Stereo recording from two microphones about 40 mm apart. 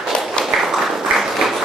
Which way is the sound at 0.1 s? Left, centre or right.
Left.